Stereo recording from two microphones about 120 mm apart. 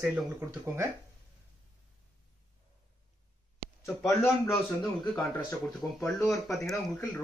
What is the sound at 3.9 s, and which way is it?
Speech, centre (ahead or behind).